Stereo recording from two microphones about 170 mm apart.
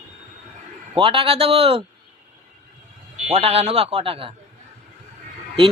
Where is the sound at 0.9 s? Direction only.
30° right (ahead or behind).